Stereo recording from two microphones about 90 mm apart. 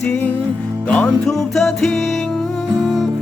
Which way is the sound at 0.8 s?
15° left (ahead or behind).